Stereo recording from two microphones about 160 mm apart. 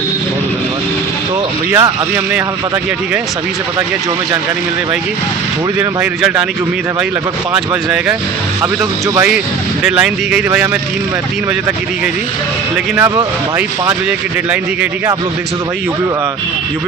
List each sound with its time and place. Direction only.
1.7 s speech: 15° right (ahead or behind)
6.0 s speech: 5° right (ahead or behind)
8.6 s speech: 15° right (ahead or behind)
9.8 s speech: 5° right (ahead or behind)
13.0 s speech: 15° right (ahead or behind)